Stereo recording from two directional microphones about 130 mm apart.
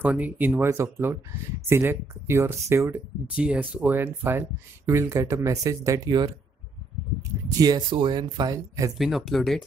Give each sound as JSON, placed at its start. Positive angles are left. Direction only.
{"t": 0.0, "sound": "speech", "side_deg": -10}
{"t": 3.3, "sound": "speech", "side_deg": -10}
{"t": 7.5, "sound": "speech", "side_deg": -30}
{"t": 8.9, "sound": "speech", "side_deg": 0}